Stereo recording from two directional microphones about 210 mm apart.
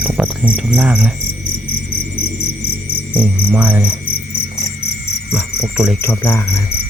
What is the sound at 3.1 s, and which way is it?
Cricket, 10° right (ahead or behind).